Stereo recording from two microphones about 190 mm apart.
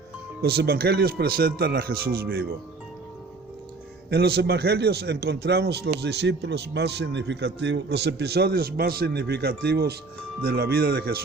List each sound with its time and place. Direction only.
0.4 s a man's voice: 55° right (ahead or behind)
4.1 s a man's voice: 55° right (ahead or behind)